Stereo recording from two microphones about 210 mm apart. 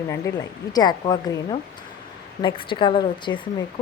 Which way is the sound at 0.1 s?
15° left (ahead or behind).